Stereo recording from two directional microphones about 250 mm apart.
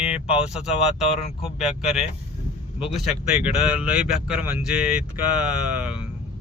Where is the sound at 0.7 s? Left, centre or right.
Left.